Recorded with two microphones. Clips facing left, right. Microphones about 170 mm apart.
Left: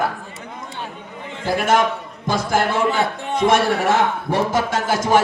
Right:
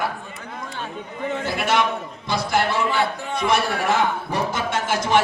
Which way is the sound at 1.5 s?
45° left (ahead or behind).